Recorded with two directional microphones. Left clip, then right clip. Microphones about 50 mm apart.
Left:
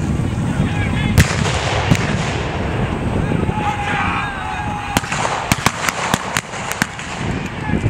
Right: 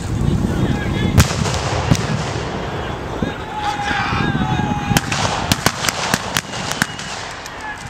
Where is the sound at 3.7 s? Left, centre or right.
Right.